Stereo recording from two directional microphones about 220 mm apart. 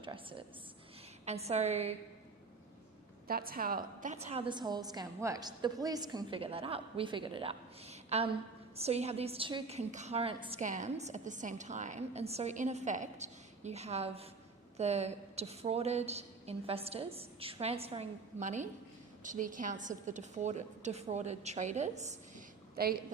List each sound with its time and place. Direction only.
0.0 s a woman's voice: 25° right (ahead or behind)
3.2 s a woman's voice: 40° right (ahead or behind)
22.8 s a woman's voice: 45° right (ahead or behind)